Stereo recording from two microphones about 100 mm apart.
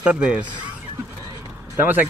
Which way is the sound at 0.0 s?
10° right (ahead or behind).